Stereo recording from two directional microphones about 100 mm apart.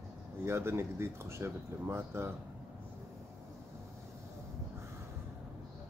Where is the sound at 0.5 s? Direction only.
25° right (ahead or behind).